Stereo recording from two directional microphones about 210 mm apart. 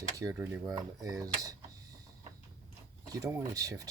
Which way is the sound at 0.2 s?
15° right (ahead or behind).